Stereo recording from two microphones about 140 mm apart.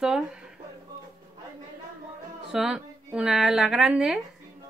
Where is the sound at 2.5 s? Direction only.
5° right (ahead or behind).